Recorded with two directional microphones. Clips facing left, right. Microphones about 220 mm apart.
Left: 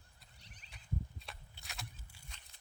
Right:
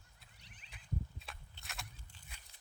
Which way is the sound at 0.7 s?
Centre (ahead or behind).